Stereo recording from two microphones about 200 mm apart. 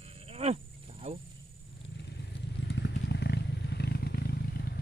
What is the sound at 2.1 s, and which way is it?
Vehicle, 55° left (ahead or behind).